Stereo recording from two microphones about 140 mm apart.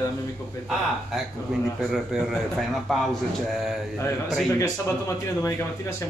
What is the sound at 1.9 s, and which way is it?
Speech, 5° right (ahead or behind).